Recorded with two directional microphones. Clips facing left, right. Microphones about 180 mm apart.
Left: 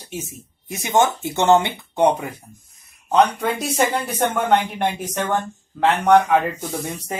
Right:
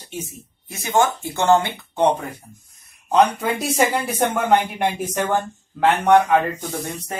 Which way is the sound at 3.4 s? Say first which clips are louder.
Right 1 dB; 5° right (ahead or behind).